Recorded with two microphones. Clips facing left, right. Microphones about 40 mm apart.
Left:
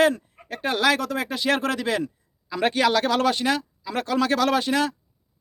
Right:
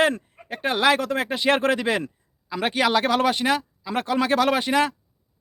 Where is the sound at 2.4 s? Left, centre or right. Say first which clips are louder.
Left 1 dB; centre.